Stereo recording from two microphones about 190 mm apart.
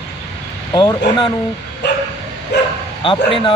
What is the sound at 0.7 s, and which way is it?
Speech, 25° left (ahead or behind).